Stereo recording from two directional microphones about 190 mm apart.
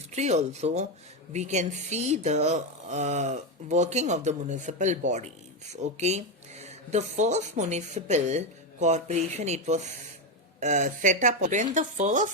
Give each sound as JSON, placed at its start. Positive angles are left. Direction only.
{"t": 0.1, "sound": "speech", "side_deg": -35}